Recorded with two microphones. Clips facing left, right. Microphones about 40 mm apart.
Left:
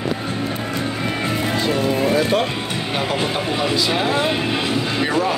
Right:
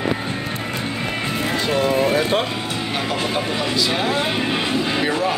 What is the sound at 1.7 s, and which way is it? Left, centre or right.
Music, right.